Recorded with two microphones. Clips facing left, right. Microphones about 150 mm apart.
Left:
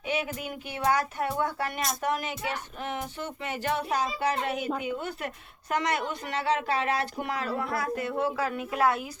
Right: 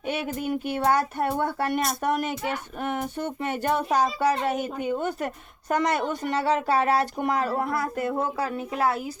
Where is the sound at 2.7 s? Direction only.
50° right (ahead or behind).